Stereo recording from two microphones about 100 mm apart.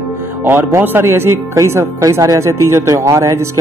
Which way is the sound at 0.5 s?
25° right (ahead or behind).